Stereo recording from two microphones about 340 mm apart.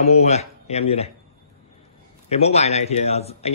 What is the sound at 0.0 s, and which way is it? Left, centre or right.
Speech, centre.